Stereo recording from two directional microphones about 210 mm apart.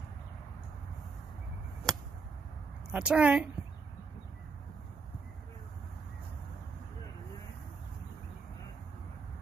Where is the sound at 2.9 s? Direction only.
5° right (ahead or behind).